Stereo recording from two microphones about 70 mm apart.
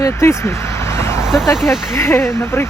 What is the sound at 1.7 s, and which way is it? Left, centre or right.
Speech, centre.